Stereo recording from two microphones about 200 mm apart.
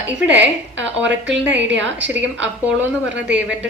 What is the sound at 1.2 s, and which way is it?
Speech, 5° right (ahead or behind).